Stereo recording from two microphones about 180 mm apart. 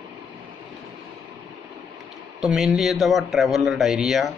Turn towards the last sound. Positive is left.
turn(degrees=0)  # may be behind; listen again after turning